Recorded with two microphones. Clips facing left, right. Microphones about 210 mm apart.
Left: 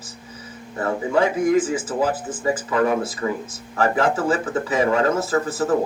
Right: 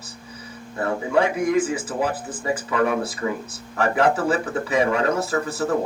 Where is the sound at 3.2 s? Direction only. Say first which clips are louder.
Left 1 dB; 45° left (ahead or behind).